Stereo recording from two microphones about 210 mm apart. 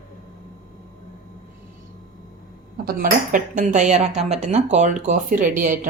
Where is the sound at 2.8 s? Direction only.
40° right (ahead or behind).